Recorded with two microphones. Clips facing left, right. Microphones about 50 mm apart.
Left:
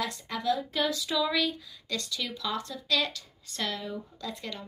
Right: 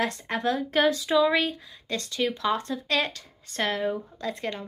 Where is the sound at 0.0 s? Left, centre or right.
Right.